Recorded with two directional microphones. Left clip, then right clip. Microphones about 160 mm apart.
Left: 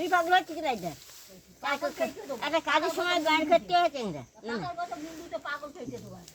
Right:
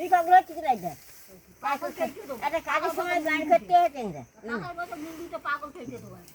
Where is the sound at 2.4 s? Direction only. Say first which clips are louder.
Even; 10° left (ahead or behind).